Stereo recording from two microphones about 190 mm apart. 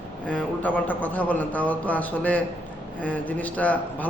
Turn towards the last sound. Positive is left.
turn(degrees=10)  # may be behind; listen again after turning